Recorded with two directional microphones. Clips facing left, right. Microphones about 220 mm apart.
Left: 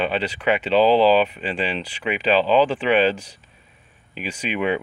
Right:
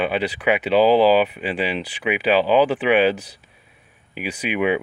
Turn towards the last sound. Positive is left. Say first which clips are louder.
# right 2 dB
turn(degrees=-10)  # may be behind; listen again after turning